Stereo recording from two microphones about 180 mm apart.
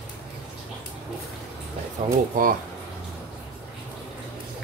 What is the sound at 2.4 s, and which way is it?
Speech, 50° right (ahead or behind).